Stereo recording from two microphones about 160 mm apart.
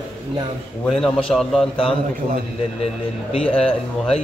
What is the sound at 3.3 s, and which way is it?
Speech, 35° left (ahead or behind).